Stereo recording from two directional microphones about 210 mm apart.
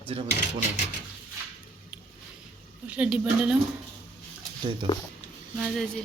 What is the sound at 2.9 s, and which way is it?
Speech, 5° right (ahead or behind).